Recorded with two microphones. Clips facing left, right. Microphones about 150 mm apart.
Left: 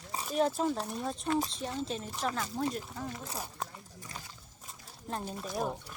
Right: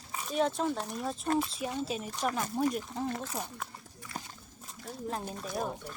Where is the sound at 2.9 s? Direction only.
25° right (ahead or behind).